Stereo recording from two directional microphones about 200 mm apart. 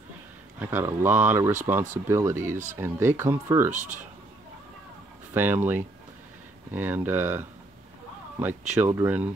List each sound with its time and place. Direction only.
0.6 s speech: 10° right (ahead or behind)
3.7 s speech: 40° right (ahead or behind)
5.3 s speech: 10° right (ahead or behind)